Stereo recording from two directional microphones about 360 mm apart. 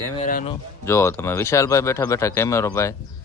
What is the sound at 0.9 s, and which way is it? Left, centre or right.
Speech, centre.